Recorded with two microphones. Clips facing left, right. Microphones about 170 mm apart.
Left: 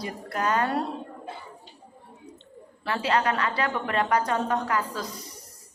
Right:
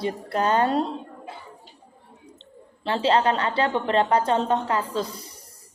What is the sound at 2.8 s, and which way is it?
A woman's voice, 25° right (ahead or behind).